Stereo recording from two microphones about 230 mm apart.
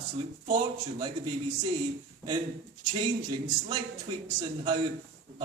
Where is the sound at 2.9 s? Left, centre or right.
Right.